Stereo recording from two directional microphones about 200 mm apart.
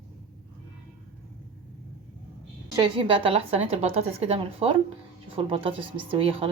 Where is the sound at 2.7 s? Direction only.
25° right (ahead or behind).